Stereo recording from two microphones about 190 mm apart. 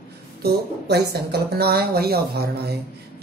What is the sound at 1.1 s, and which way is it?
Speech, 55° right (ahead or behind).